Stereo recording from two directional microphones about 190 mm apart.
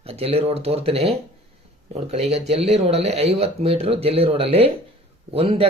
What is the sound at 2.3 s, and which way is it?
Speech, 35° right (ahead or behind).